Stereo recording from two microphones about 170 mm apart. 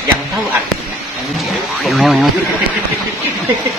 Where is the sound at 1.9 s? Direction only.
Centre (ahead or behind).